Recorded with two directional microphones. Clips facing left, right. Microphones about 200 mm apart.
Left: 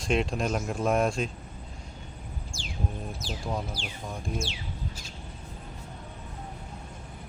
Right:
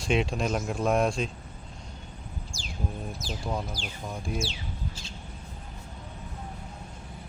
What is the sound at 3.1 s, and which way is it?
Speech, 40° right (ahead or behind).